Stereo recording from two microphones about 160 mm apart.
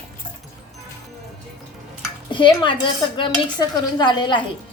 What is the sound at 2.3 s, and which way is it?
Dishes, 30° left (ahead or behind).